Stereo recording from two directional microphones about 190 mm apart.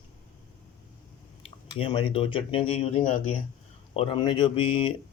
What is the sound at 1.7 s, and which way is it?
Speech, 25° left (ahead or behind).